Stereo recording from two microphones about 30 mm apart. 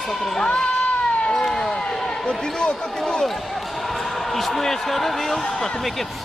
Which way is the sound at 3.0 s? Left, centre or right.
Centre.